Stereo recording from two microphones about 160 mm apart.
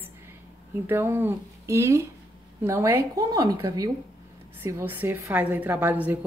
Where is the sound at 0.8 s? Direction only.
15° right (ahead or behind).